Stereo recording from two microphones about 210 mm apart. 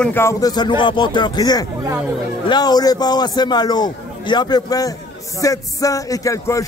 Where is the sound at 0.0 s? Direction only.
10° left (ahead or behind).